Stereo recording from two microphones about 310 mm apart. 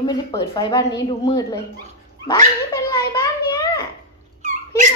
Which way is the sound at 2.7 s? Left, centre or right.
Centre.